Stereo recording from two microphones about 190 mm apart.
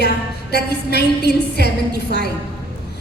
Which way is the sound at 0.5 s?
60° left (ahead or behind).